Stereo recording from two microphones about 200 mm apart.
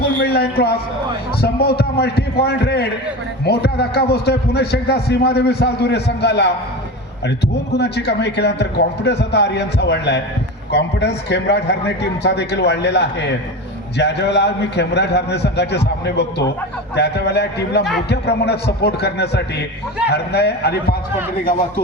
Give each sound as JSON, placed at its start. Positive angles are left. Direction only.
{"t": 0.0, "sound": "a man's voice", "side_deg": 55}